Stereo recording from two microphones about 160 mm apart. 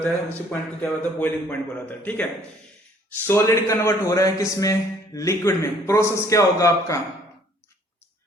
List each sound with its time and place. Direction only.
0.0 s a man's voice: 10° left (ahead or behind)
3.2 s a man's voice: 15° left (ahead or behind)